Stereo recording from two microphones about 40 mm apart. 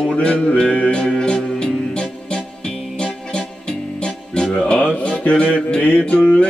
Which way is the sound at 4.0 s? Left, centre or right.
Left.